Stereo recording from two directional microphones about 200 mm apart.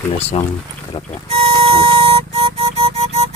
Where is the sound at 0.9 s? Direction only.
25° left (ahead or behind).